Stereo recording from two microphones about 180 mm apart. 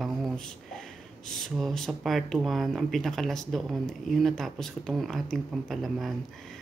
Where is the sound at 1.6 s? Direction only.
Centre (ahead or behind).